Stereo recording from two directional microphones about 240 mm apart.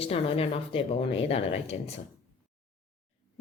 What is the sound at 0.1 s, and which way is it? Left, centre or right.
A woman's voice, left.